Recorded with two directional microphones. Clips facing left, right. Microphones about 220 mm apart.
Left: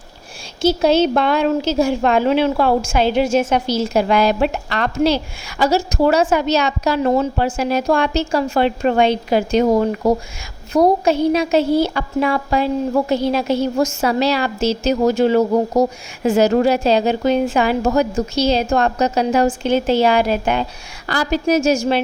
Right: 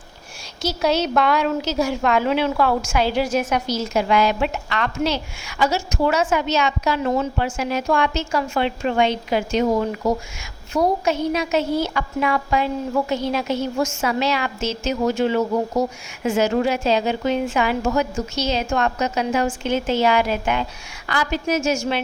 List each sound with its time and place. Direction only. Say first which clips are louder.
0.6 s a woman's voice: left 7 dB; 30° left (ahead or behind)